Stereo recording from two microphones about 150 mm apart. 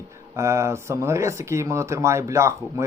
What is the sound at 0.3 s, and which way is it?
Speech, 20° right (ahead or behind).